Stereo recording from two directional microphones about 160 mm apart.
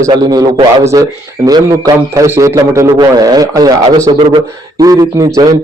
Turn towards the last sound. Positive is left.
turn(degrees=-20)  # may be behind; listen again after turning